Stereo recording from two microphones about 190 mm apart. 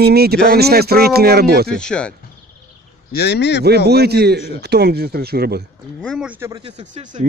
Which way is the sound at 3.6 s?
55° right (ahead or behind).